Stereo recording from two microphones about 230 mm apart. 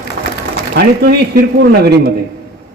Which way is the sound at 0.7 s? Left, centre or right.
Right.